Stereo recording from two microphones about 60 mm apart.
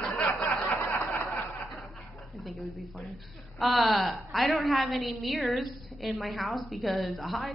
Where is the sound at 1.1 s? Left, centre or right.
Left.